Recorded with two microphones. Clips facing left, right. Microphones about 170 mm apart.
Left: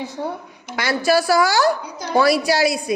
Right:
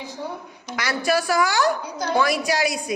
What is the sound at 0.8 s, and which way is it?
A woman's voice, 30° left (ahead or behind).